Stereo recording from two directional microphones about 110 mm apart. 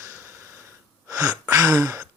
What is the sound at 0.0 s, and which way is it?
Wheeze, 25° right (ahead or behind).